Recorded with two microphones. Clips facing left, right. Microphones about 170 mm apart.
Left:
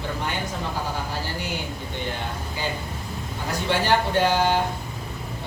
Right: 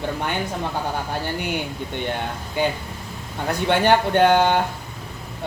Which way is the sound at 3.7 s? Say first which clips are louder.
Right 4 dB; 60° right (ahead or behind).